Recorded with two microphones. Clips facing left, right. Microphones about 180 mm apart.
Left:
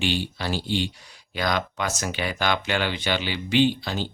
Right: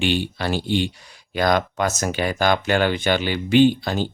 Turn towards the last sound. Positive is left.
turn(degrees=-50)  # may be behind; listen again after turning